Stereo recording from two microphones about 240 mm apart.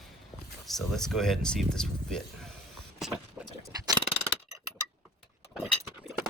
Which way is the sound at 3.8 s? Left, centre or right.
Centre.